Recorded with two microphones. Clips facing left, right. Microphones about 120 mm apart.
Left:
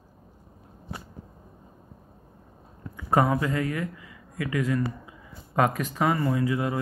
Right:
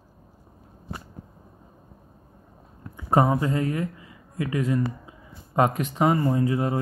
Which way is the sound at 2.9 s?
25° right (ahead or behind).